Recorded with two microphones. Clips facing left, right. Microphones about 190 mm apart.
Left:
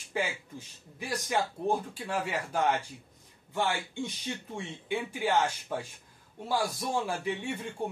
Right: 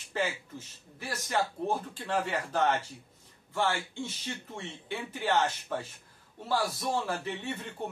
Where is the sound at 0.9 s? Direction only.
15° left (ahead or behind).